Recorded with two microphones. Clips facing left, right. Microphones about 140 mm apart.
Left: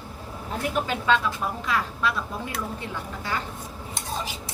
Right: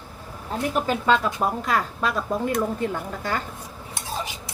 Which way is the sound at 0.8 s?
45° right (ahead or behind).